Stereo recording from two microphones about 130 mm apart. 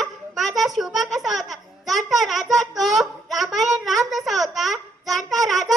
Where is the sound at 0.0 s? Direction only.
Centre (ahead or behind).